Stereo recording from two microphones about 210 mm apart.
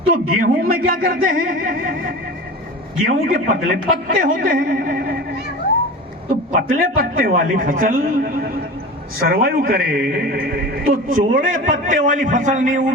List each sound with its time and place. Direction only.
0.1 s a man's voice: 45° right (ahead or behind)
3.2 s a man's voice: 40° right (ahead or behind)
6.5 s a man's voice: 45° right (ahead or behind)